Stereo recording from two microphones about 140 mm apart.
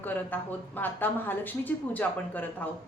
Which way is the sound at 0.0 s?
10° left (ahead or behind).